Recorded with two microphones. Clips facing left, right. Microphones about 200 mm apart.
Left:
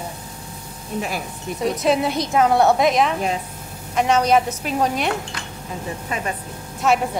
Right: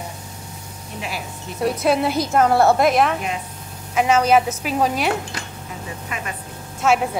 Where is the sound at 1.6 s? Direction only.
Centre (ahead or behind).